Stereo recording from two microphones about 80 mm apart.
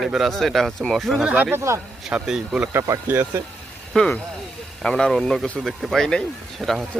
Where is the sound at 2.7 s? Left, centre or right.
Right.